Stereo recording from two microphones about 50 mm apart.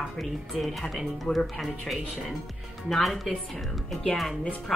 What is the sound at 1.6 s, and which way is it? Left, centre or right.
A woman's voice, centre.